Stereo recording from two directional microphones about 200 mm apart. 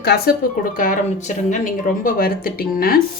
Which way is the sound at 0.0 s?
50° left (ahead or behind).